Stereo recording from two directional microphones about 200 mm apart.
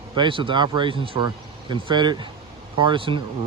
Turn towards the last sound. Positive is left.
turn(degrees=-25)  # may be behind; listen again after turning